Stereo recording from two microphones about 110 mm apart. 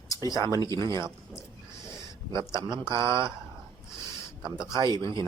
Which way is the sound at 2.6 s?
45° right (ahead or behind).